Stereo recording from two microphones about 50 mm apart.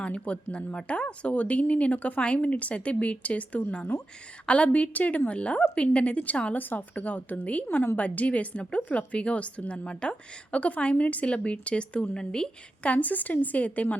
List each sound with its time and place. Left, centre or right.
0.0 s a woman's voice: left
12.9 s a woman's voice: left